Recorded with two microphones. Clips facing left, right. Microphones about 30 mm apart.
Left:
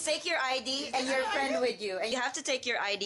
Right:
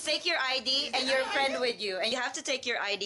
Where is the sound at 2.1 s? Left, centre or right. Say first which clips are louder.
Even; centre.